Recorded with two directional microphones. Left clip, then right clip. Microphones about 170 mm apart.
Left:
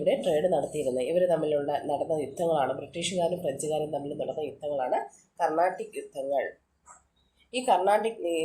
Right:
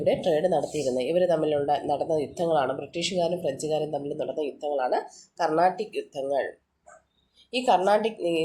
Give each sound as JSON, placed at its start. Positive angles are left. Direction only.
{"t": 0.0, "sound": "speech", "side_deg": -55}
{"t": 7.5, "sound": "speech", "side_deg": -55}